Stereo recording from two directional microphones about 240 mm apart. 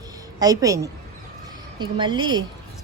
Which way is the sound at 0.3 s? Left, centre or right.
Centre.